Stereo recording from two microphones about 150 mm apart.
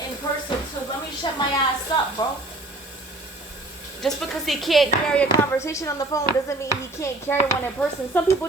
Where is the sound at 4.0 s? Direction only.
Centre (ahead or behind).